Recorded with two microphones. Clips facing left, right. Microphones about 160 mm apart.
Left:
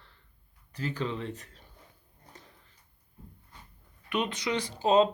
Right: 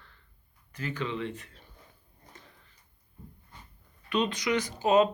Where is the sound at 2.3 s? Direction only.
40° left (ahead or behind).